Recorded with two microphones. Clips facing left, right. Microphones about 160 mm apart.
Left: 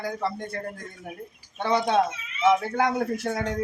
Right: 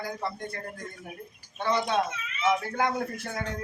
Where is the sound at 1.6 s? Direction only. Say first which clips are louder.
Left 4 dB; 65° left (ahead or behind).